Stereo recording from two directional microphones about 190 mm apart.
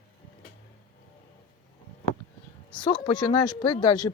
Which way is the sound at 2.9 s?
25° left (ahead or behind).